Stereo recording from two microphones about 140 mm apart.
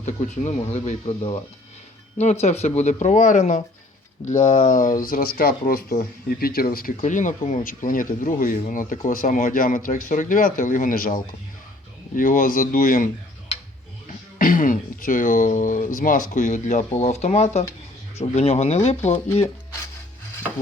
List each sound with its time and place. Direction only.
0.0 s speech: 55° left (ahead or behind)
2.1 s speech: 50° left (ahead or behind); by 4.9 s 70° left (ahead or behind)
5.0 s speech: 90° left
14.3 s speech: 75° left (ahead or behind); by 19.5 s 45° left (ahead or behind)